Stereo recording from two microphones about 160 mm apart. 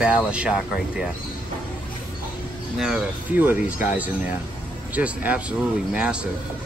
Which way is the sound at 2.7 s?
5° right (ahead or behind).